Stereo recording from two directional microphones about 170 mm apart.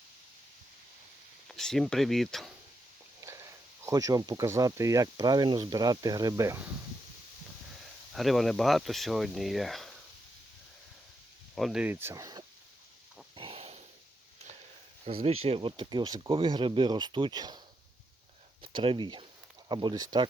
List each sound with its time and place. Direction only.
1.5 s speech: centre (ahead or behind)
3.8 s speech: 20° right (ahead or behind)
8.1 s speech: centre (ahead or behind)
11.5 s speech: centre (ahead or behind); by 12.5 s 20° right (ahead or behind)
13.3 s a sound: 35° right (ahead or behind)
15.0 s speech: 35° right (ahead or behind)
18.6 s speech: 30° right (ahead or behind)